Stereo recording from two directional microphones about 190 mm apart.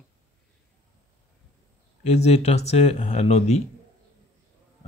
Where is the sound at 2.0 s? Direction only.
35° left (ahead or behind).